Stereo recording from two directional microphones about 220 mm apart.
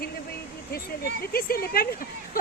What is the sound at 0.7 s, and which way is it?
Speech, 40° left (ahead or behind).